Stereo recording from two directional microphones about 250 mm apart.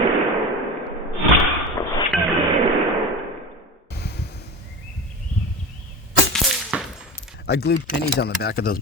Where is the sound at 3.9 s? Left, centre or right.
Left.